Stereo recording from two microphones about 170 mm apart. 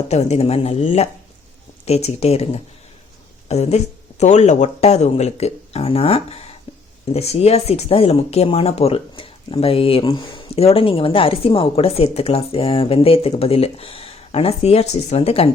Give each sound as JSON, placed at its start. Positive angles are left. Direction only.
{"t": 0.1, "sound": "speech", "side_deg": 40}
{"t": 6.7, "sound": "a sound", "side_deg": 30}
{"t": 7.1, "sound": "speech", "side_deg": 35}